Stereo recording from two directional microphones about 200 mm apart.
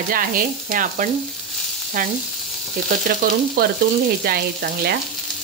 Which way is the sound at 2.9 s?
40° right (ahead or behind).